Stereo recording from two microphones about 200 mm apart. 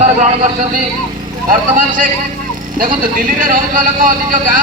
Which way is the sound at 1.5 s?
45° right (ahead or behind).